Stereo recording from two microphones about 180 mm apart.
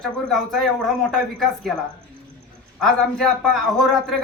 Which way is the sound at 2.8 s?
5° left (ahead or behind).